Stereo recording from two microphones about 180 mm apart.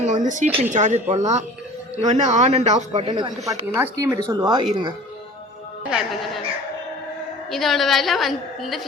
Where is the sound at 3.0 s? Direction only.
25° right (ahead or behind).